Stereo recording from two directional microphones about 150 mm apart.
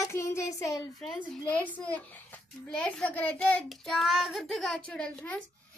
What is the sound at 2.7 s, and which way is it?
Child singing, 5° left (ahead or behind).